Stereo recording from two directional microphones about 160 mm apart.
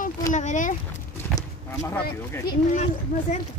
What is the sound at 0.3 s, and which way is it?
Speech, 50° left (ahead or behind).